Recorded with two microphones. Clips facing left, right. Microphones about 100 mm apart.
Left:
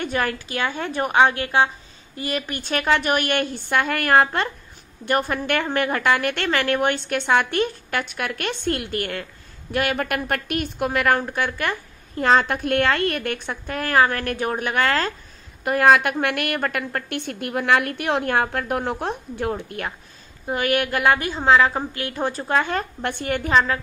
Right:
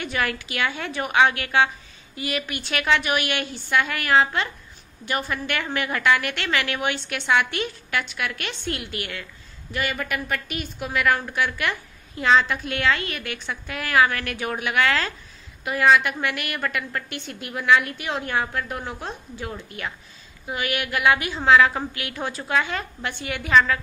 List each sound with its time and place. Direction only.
0.0 s a woman's voice: 40° left (ahead or behind)
23.5 s a woman's voice: 30° left (ahead or behind)